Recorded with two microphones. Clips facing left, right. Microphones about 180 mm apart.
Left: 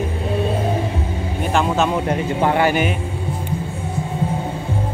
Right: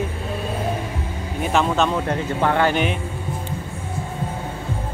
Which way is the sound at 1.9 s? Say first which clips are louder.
Left 3 dB; 15° left (ahead or behind).